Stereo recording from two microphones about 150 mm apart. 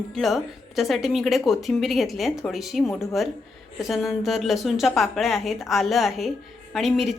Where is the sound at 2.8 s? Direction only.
20° left (ahead or behind).